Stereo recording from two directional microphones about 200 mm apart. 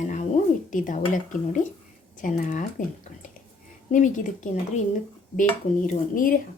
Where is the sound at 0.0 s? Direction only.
35° left (ahead or behind).